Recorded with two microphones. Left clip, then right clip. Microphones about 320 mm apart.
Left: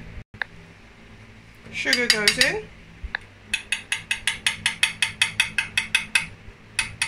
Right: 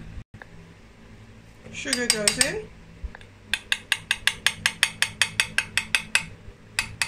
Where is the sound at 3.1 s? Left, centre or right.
Left.